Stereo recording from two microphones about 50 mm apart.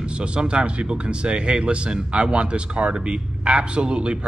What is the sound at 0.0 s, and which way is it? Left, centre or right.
Speech, right.